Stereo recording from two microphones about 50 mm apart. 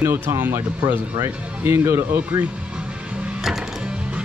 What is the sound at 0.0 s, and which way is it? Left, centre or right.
Speech, right.